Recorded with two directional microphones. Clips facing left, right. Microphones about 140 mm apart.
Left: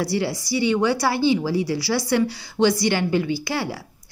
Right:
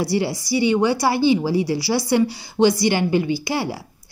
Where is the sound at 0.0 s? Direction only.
20° right (ahead or behind).